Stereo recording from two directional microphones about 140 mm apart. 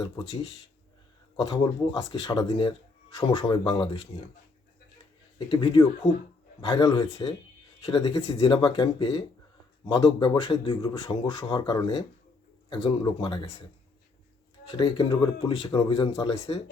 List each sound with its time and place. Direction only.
1.4 s a man's voice: 30° left (ahead or behind)
5.5 s a man's voice: 35° left (ahead or behind)
7.9 s a man's voice: 45° left (ahead or behind)
14.7 s a man's voice: 40° left (ahead or behind)